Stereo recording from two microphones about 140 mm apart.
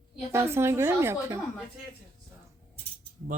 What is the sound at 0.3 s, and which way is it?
Speech, 20° right (ahead or behind).